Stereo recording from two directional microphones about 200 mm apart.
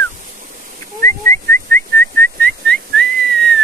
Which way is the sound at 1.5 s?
10° left (ahead or behind).